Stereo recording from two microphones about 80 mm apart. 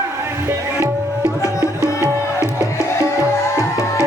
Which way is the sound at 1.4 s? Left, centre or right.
Left.